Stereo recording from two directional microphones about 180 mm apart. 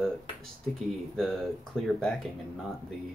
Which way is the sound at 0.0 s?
5° left (ahead or behind).